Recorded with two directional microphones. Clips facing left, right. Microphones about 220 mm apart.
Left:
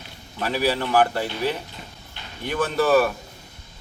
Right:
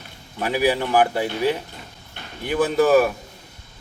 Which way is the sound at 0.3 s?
15° right (ahead or behind).